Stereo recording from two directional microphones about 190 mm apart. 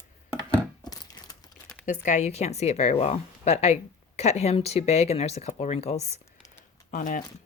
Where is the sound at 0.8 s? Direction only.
20° left (ahead or behind).